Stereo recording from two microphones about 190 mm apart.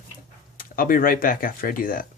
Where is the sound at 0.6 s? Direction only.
50° left (ahead or behind).